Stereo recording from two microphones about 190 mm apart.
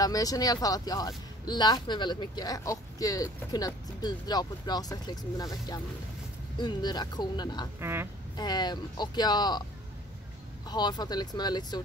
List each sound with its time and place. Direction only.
0.0 s speech: 20° left (ahead or behind)
7.8 s speech: 10° right (ahead or behind)
8.4 s speech: 20° left (ahead or behind)
10.7 s speech: 20° left (ahead or behind)